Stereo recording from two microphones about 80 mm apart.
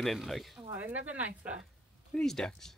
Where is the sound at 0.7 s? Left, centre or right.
Right.